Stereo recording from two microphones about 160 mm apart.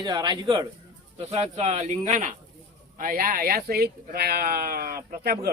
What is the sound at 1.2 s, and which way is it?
Speech, 40° right (ahead or behind).